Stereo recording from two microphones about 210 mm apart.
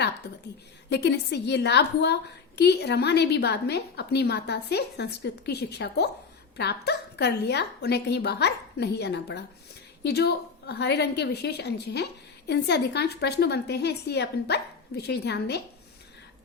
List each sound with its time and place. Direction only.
0.9 s a woman's voice: 55° left (ahead or behind)